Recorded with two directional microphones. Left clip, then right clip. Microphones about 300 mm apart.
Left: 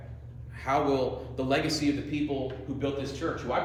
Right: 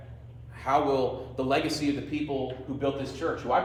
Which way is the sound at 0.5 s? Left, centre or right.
Centre.